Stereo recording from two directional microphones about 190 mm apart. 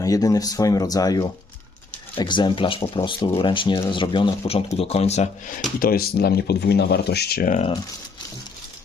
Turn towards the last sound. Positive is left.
turn(degrees=45)  # may be behind; listen again after turning